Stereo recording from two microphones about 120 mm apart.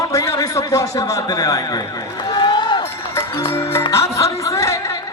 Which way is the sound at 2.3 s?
40° left (ahead or behind).